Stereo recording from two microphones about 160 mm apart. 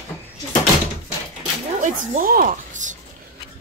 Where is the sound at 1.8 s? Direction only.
50° right (ahead or behind).